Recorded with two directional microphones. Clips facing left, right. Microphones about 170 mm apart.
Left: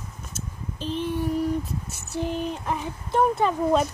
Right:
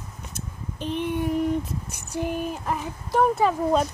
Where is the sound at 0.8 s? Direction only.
60° right (ahead or behind).